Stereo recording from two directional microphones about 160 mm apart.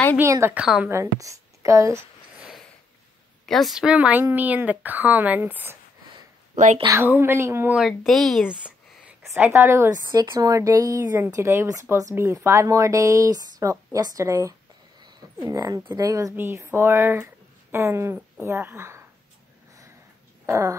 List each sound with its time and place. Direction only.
0.2 s a woman's voice: 15° right (ahead or behind)
2.3 s a sound: 5° right (ahead or behind)
3.4 s a woman's voice: centre (ahead or behind)
6.5 s speech: 50° right (ahead or behind)
6.9 s a woman's voice: 15° right (ahead or behind)
9.3 s a woman's voice: 15° right (ahead or behind)
20.4 s a sound: 20° right (ahead or behind)